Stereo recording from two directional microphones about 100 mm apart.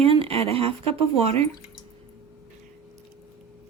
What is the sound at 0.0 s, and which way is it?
Speech, 70° right (ahead or behind).